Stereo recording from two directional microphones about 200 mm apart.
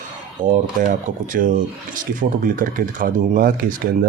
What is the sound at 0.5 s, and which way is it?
Speech, 40° right (ahead or behind).